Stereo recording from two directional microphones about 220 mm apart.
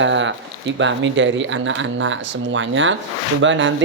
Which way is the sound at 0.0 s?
55° right (ahead or behind).